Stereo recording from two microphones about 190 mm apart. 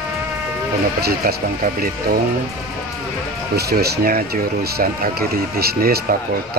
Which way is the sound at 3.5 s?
55° right (ahead or behind).